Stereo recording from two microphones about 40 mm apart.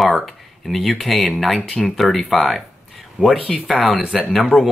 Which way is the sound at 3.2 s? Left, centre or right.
Right.